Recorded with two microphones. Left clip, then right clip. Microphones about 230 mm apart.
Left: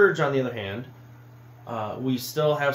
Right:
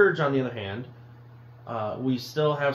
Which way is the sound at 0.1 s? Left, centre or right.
Left.